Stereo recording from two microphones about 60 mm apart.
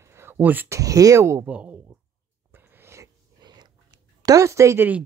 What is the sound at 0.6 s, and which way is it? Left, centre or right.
Speech, right.